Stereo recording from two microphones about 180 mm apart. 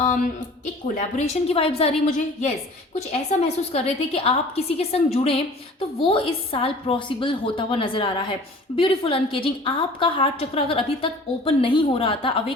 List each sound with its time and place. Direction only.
0.9 s a woman's voice: 35° left (ahead or behind)